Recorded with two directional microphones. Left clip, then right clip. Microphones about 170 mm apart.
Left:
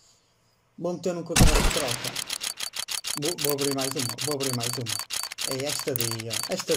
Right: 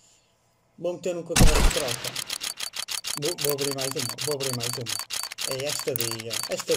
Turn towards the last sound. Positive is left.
turn(degrees=0)  # may be behind; listen again after turning